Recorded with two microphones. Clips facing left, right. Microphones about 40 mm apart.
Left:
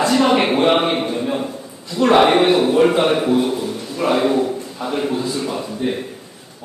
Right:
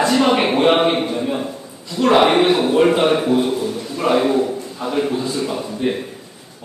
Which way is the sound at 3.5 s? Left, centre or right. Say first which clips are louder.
Right 1 dB; centre.